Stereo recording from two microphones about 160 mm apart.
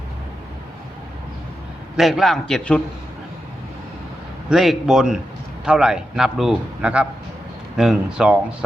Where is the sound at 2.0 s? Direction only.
Centre (ahead or behind).